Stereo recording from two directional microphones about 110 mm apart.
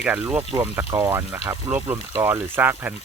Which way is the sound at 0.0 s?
15° right (ahead or behind).